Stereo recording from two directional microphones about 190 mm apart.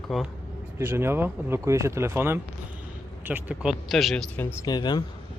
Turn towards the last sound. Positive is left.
turn(degrees=20)  # may be behind; listen again after turning